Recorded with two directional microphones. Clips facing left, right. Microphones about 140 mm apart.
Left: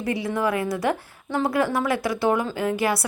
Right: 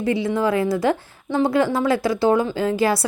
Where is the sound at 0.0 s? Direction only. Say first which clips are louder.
Right 4 dB; 25° right (ahead or behind).